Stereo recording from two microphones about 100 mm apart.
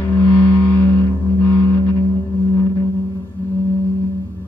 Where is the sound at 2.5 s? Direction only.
25° left (ahead or behind).